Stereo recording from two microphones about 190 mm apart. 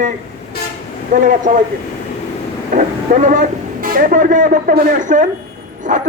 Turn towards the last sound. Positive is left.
turn(degrees=-45)  # may be behind; listen again after turning